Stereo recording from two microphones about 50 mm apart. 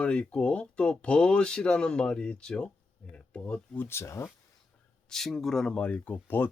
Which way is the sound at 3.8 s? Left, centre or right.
Left.